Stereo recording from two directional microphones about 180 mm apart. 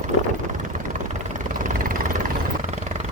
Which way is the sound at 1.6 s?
50° right (ahead or behind).